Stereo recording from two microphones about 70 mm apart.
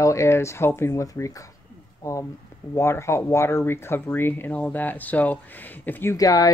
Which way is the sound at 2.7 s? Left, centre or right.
Left.